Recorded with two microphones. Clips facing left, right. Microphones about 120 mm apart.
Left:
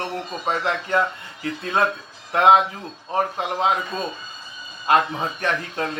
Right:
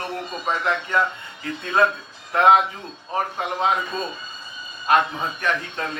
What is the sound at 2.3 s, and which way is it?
Speech, 25° left (ahead or behind).